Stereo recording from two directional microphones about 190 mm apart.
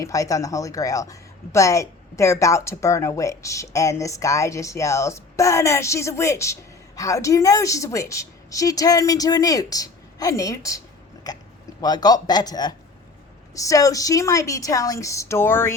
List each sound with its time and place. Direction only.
0.0 s a woman's voice: 15° left (ahead or behind)